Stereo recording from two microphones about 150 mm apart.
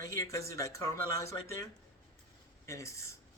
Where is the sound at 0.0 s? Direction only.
25° left (ahead or behind).